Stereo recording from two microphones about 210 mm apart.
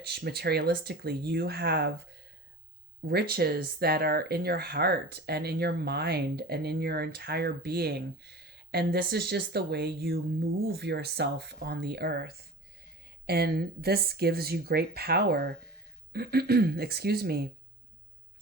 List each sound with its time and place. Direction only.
0.0 s speech: 50° right (ahead or behind)
3.1 s speech: 50° right (ahead or behind)